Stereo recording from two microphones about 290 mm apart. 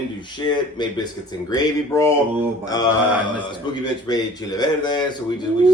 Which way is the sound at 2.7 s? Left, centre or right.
Centre.